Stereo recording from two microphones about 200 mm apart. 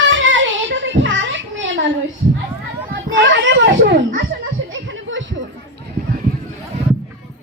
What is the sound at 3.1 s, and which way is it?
Children playing, 65° right (ahead or behind).